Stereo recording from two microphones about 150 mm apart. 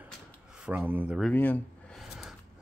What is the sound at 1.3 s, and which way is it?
Speech, 10° left (ahead or behind).